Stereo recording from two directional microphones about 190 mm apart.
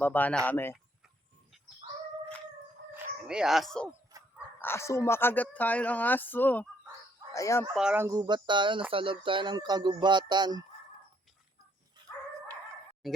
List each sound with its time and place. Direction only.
0.0 s speech: 10° left (ahead or behind)
2.9 s dog: 5° right (ahead or behind)
4.6 s speech: 15° left (ahead or behind)
7.7 s speech: 5° right (ahead or behind); by 10.6 s 20° right (ahead or behind)
13.0 s music: centre (ahead or behind)